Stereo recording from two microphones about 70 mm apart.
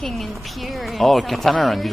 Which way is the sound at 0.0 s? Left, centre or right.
Centre.